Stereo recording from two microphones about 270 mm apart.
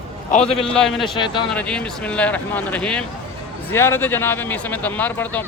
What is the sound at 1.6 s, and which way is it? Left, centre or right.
Speech, centre.